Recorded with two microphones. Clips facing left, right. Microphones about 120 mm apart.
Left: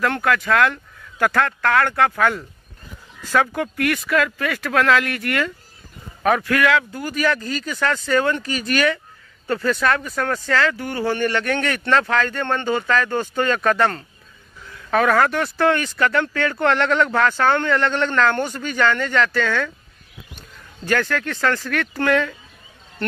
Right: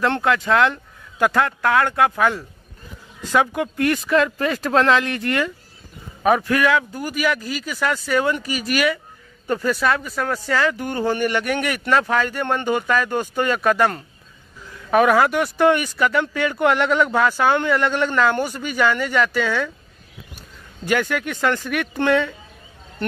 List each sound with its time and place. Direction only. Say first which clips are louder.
0.0 s speech: right 1 dB; 25° right (ahead or behind)
20.8 s speech: even; 15° right (ahead or behind)